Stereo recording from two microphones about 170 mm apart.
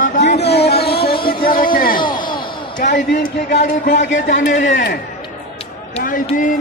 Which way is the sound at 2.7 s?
50° left (ahead or behind).